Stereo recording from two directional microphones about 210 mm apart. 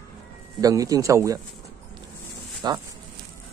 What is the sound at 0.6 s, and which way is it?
Speech, 15° right (ahead or behind).